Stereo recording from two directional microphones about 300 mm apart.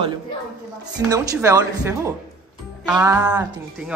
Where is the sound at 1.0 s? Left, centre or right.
Centre.